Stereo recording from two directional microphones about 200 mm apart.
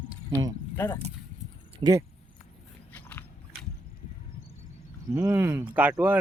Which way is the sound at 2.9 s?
10° left (ahead or behind).